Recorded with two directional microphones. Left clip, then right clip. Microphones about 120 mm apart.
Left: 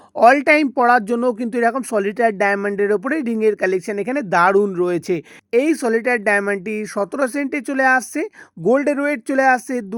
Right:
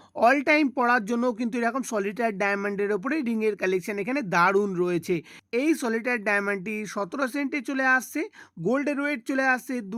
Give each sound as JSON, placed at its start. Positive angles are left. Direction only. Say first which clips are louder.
{"t": 0.2, "sound": "speech", "louder": "left 8 dB", "side_deg": 30}